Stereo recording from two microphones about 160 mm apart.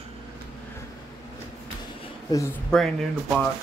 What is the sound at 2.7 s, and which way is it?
Speech, centre (ahead or behind).